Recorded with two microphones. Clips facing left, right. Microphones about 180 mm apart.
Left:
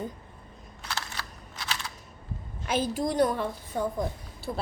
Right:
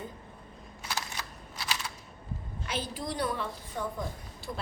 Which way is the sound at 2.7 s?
45° left (ahead or behind).